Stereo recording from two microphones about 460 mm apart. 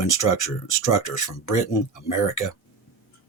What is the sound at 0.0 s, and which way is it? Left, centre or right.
Speech, left.